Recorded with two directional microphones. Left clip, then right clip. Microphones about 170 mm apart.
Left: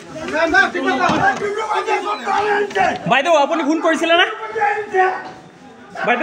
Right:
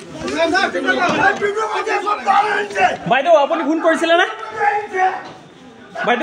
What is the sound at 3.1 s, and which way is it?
Speech, 10° left (ahead or behind).